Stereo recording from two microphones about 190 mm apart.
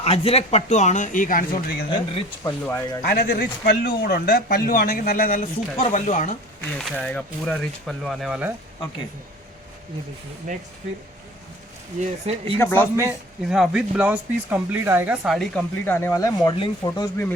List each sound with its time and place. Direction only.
0.0 s speech: 30° left (ahead or behind); by 1.8 s 45° left (ahead or behind)
1.9 s speech: 25° left (ahead or behind)
2.6 s speech: 10° left (ahead or behind)
3.1 s speech: 50° left (ahead or behind)
6.6 s speech: 5° left (ahead or behind)
11.9 s speech: 35° right (ahead or behind)
12.5 s speech: 10° left (ahead or behind)
13.0 s speech: 5° right (ahead or behind); by 17.3 s 15° left (ahead or behind)